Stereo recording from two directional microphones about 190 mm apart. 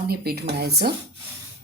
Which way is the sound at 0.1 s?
55° right (ahead or behind).